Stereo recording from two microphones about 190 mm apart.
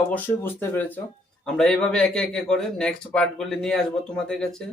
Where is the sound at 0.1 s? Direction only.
10° left (ahead or behind).